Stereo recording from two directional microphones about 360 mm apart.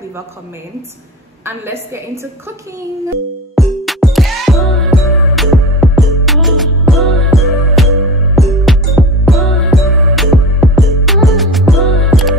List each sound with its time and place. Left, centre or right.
3.5 s music: centre